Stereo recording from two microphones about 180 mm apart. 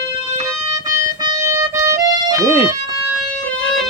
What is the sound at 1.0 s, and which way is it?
Music, 15° right (ahead or behind).